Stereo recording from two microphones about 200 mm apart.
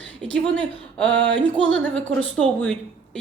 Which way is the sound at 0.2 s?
5° left (ahead or behind).